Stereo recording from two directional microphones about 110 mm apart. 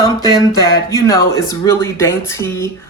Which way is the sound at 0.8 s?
30° left (ahead or behind).